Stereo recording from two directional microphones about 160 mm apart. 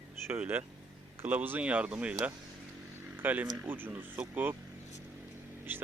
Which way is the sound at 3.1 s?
10° right (ahead or behind).